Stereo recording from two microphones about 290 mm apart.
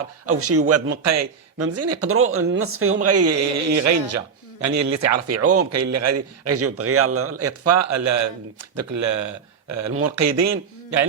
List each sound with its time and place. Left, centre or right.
0.3 s speech: right
1.0 s speech: right